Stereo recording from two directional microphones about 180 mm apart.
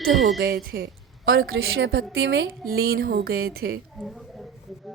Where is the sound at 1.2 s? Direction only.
75° right (ahead or behind); by 3.7 s 60° right (ahead or behind).